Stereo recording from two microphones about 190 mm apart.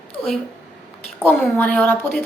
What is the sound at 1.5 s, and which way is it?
Speech, 5° left (ahead or behind).